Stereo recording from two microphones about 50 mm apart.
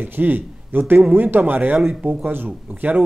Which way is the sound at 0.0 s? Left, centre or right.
Right.